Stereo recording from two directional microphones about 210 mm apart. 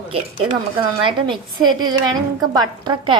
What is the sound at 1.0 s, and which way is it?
A woman's voice, 25° right (ahead or behind).